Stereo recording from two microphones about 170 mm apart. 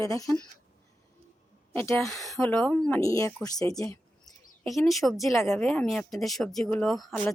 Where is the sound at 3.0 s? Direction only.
20° left (ahead or behind).